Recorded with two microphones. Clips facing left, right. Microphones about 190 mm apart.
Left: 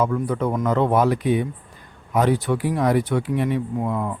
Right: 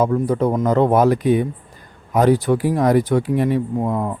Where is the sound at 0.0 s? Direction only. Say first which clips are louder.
Right 4 dB; 35° right (ahead or behind).